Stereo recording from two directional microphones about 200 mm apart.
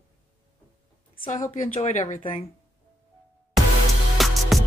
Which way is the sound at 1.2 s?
35° left (ahead or behind).